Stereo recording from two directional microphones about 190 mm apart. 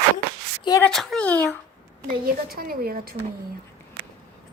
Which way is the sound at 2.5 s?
50° right (ahead or behind).